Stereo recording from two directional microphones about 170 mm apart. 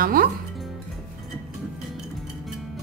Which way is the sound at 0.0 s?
60° right (ahead or behind).